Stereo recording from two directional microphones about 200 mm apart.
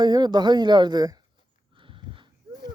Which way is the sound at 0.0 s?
20° right (ahead or behind).